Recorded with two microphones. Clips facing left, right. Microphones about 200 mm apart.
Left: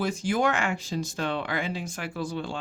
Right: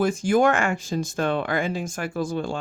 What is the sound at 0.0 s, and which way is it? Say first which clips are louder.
Speech: right 6 dB; 50° right (ahead or behind).